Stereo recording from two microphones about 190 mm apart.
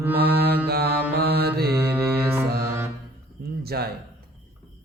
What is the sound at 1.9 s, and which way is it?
Music, 15° right (ahead or behind).